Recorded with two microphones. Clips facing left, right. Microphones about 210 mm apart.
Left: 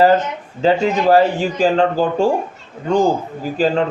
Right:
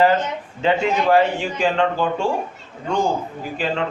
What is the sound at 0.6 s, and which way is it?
Speech, 35° left (ahead or behind).